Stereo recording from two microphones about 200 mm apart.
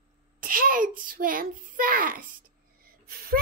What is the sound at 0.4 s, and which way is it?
A child's voice, 45° right (ahead or behind).